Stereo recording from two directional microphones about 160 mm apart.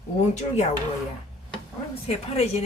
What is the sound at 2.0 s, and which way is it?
Speech, 40° left (ahead or behind).